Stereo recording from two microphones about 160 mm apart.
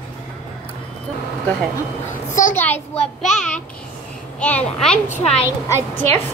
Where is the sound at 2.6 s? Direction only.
10° left (ahead or behind).